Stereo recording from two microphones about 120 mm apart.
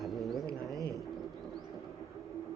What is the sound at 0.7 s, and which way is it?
Bird, 30° right (ahead or behind).